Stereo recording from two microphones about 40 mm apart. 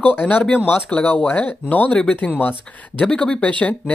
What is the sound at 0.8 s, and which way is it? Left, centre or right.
Speech, left.